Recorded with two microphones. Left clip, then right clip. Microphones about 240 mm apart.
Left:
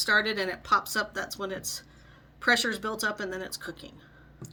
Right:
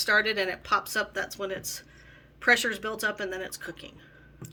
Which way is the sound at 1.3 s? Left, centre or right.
Centre.